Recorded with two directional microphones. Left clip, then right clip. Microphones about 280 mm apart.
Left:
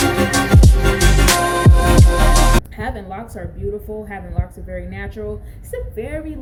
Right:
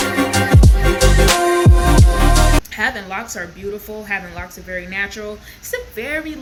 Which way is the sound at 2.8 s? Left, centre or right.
Right.